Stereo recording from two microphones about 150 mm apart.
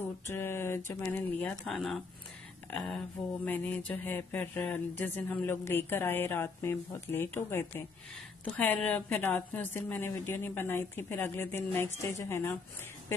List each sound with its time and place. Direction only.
0.3 s speech: 15° left (ahead or behind)
1.5 s speech: centre (ahead or behind)
3.4 s speech: 10° left (ahead or behind)